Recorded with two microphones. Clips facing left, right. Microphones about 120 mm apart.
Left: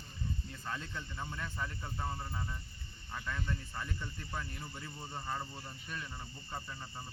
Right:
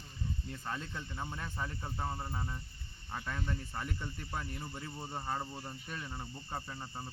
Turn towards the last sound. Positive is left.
turn(degrees=-25)  # may be behind; listen again after turning